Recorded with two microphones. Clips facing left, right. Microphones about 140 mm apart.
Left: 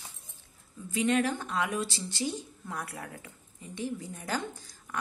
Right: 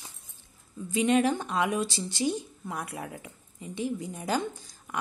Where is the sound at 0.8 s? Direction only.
20° right (ahead or behind).